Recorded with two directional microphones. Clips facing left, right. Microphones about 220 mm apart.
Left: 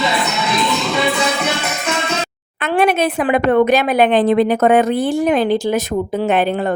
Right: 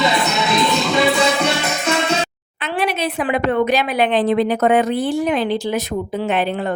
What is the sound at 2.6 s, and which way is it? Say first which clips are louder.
A woman's voice: left 6 dB; 50° left (ahead or behind).